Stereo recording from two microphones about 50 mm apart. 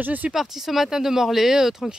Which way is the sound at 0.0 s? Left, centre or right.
Right.